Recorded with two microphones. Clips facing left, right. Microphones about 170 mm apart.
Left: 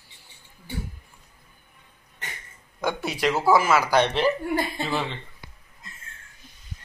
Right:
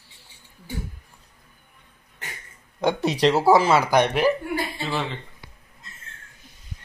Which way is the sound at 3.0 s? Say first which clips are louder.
Right 4 dB; 35° right (ahead or behind).